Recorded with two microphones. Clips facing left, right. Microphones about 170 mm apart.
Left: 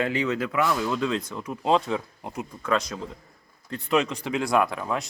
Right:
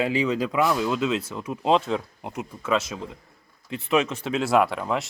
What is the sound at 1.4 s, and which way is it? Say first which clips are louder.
Speech: right 1 dB; 20° right (ahead or behind).